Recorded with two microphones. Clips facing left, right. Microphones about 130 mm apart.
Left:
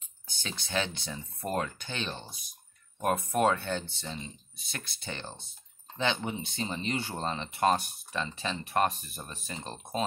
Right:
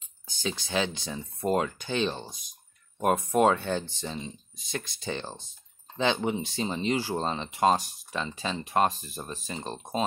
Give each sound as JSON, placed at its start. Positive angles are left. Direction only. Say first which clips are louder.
{"t": 0.4, "sound": "speech", "louder": "right 4 dB", "side_deg": -15}
{"t": 9.1, "sound": "speech", "louder": "right 5 dB", "side_deg": -30}